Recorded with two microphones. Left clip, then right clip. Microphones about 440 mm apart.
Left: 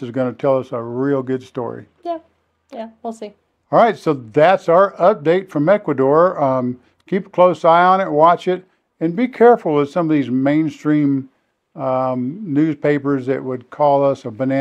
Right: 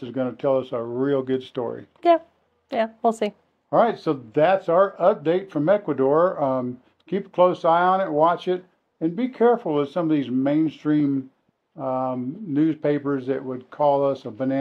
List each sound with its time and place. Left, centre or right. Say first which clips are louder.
0.0 s speech: left 6 dB; left
2.0 s speech: right 11 dB; right
3.7 s speech: left 6 dB; left